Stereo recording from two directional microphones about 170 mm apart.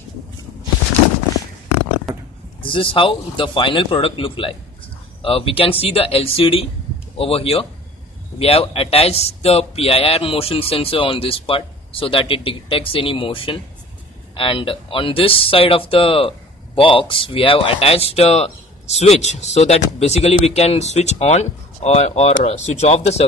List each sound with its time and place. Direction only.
2.6 s a man's voice: 30° left (ahead or behind)